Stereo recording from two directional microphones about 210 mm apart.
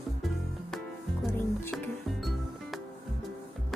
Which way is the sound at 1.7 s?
Centre (ahead or behind).